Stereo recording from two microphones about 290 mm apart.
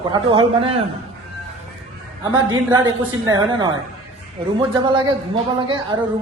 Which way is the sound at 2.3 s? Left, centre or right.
Centre.